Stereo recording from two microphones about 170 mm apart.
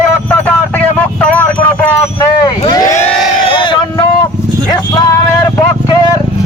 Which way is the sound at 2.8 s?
45° left (ahead or behind).